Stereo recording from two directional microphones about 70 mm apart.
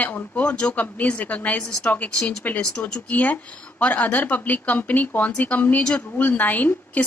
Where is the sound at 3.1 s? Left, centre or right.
Left.